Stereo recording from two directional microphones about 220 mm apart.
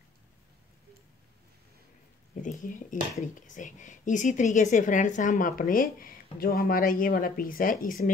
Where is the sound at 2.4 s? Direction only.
35° left (ahead or behind).